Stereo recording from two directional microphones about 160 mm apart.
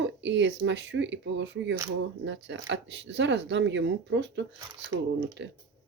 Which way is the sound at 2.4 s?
90° right.